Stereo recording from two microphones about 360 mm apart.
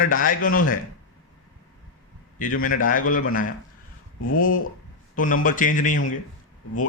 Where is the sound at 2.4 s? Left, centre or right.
Left.